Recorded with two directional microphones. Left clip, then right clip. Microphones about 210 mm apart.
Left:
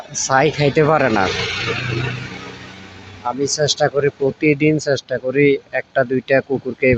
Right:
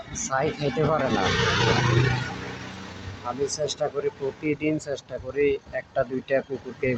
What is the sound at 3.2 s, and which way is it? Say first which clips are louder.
Speech: left 9 dB; 15° left (ahead or behind).